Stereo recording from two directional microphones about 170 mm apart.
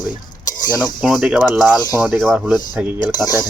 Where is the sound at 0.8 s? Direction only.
Centre (ahead or behind).